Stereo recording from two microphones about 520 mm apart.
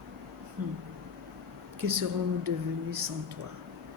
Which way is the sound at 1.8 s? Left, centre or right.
Right.